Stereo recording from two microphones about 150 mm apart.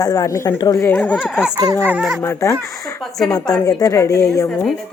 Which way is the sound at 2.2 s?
20° left (ahead or behind).